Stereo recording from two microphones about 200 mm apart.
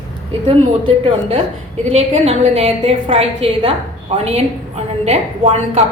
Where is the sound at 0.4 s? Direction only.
25° right (ahead or behind).